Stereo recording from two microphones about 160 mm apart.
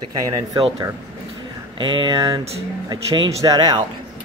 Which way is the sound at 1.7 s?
30° right (ahead or behind).